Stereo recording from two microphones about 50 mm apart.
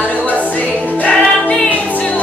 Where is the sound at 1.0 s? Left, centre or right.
Left.